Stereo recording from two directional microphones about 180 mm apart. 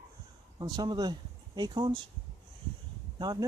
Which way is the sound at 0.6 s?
20° right (ahead or behind).